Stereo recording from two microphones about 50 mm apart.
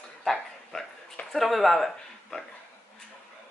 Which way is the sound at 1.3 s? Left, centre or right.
Centre.